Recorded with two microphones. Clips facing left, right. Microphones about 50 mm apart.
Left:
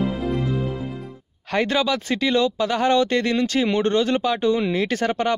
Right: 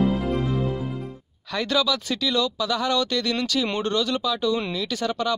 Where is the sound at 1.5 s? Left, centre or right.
Left.